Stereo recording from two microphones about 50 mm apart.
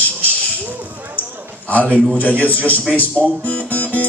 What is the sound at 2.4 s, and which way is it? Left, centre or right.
Speech, left.